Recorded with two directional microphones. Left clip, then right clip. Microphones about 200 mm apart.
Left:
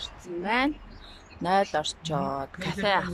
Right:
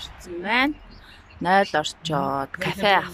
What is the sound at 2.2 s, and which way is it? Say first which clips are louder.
Speech: right 6 dB; 20° right (ahead or behind).